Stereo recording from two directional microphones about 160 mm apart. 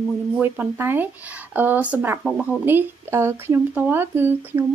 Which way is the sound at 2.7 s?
15° right (ahead or behind).